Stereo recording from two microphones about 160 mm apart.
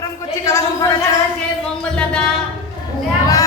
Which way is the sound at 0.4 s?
20° left (ahead or behind).